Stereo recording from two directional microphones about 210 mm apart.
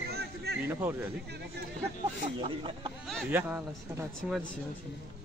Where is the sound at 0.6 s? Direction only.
10° right (ahead or behind).